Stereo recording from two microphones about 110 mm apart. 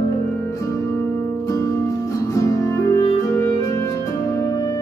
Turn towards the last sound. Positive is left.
turn(degrees=30)  # may be behind; listen again after turning